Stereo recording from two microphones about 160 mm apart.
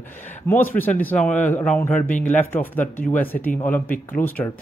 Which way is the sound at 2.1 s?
50° left (ahead or behind).